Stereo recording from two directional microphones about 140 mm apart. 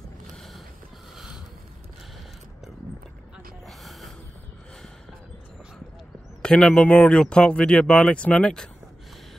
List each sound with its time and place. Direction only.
1.1 s a sound: 5° right (ahead or behind)
3.6 s gasp: centre (ahead or behind)
6.4 s speech: 5° left (ahead or behind)